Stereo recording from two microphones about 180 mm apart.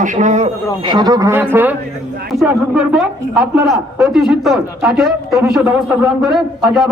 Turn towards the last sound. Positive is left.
turn(degrees=0)  # may be behind; listen again after turning